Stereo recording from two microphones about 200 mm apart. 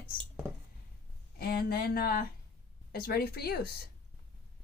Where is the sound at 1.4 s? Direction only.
50° left (ahead or behind).